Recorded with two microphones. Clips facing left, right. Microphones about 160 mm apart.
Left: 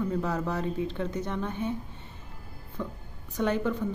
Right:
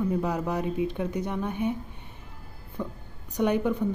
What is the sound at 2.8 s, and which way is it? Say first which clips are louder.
Speech: right 2 dB; 15° right (ahead or behind).